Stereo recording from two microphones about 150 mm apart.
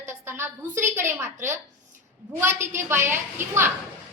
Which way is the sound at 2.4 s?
15° right (ahead or behind).